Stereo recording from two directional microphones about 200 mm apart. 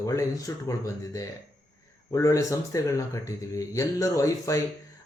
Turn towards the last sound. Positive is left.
turn(degrees=15)  # may be behind; listen again after turning